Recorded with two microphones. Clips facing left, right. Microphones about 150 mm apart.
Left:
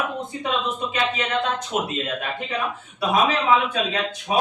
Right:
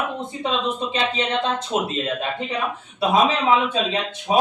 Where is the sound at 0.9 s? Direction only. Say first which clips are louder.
Even; 30° right (ahead or behind).